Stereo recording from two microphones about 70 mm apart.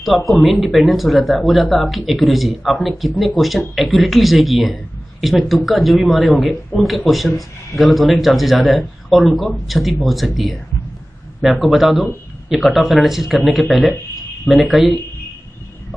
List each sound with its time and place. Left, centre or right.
0.0 s speech: centre
11.6 s speech: centre